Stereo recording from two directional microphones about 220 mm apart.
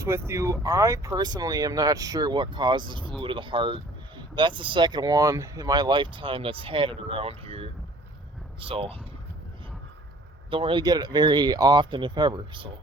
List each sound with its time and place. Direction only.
0.0 s speech: 15° right (ahead or behind)
10.5 s speech: 25° right (ahead or behind)